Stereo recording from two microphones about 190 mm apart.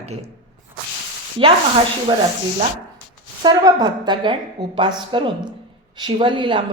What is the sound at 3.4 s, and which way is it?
A woman's voice, 20° right (ahead or behind).